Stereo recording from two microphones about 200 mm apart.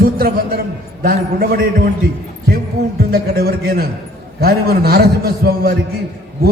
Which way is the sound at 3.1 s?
50° right (ahead or behind).